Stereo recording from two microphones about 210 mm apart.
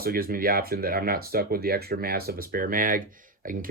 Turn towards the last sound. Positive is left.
turn(degrees=-40)  # may be behind; listen again after turning